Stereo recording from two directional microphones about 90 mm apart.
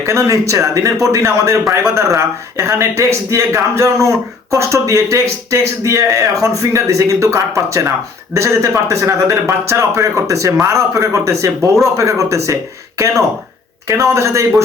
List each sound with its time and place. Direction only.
0.0 s speech: 30° right (ahead or behind)
13.8 s speech: 35° right (ahead or behind)